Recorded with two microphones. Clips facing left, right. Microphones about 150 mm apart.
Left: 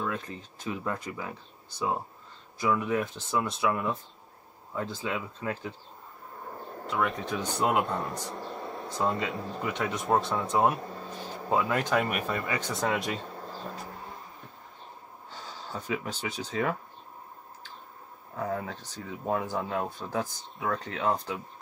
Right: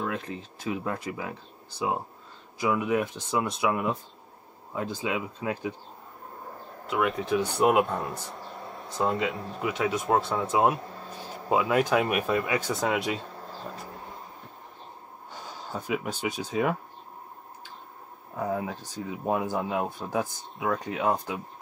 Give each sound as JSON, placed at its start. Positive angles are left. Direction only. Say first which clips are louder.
{"t": 0.0, "sound": "speech", "louder": "right 2 dB", "side_deg": -15}
{"t": 6.9, "sound": "speech", "louder": "right 4 dB", "side_deg": 0}
{"t": 7.8, "sound": "speech", "louder": "right 1 dB", "side_deg": 0}
{"t": 15.3, "sound": "speech", "louder": "right 2 dB", "side_deg": -15}
{"t": 18.3, "sound": "speech", "louder": "right 3 dB", "side_deg": -10}